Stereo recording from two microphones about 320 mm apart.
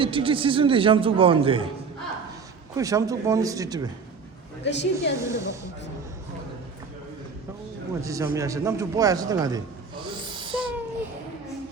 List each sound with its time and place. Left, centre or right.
0.0 s a man's voice: centre
2.7 s a man's voice: centre
4.6 s a woman's voice: left
5.2 s a man's voice: centre
8.0 s a man's voice: centre